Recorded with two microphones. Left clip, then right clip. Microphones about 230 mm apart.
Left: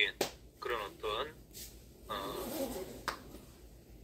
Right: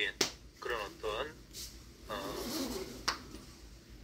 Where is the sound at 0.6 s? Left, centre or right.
Centre.